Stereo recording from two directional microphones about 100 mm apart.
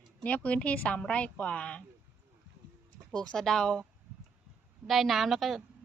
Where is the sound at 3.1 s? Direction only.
10° left (ahead or behind).